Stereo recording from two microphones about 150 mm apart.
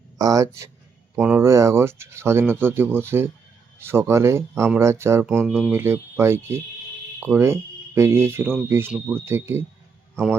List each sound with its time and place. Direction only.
0.2 s speech: 25° right (ahead or behind)